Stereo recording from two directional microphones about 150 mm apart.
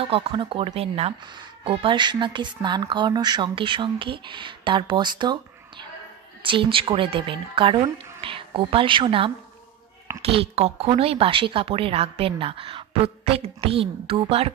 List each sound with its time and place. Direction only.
0.0 s speech: 35° right (ahead or behind)
1.2 s speech: 35° right (ahead or behind)